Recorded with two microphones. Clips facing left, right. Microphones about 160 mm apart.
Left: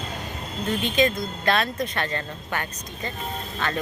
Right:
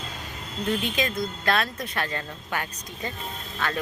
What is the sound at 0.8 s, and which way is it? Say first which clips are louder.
Speech: left 5 dB; centre (ahead or behind).